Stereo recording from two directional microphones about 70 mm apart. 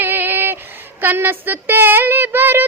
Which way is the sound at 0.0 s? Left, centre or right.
Right.